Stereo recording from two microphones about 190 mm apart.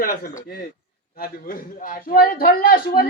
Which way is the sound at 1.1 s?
50° left (ahead or behind).